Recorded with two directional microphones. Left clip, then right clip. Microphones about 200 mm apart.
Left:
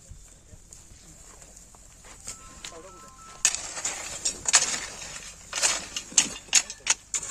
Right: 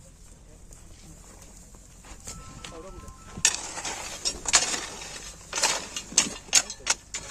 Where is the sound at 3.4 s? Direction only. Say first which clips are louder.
Right 1 dB; 20° right (ahead or behind).